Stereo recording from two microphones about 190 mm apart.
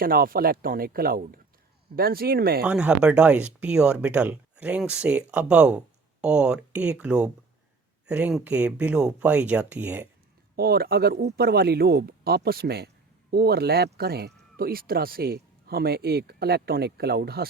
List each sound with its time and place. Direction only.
0.0 s speech: 50° right (ahead or behind)
2.6 s speech: 5° right (ahead or behind)
10.5 s speech: 55° right (ahead or behind)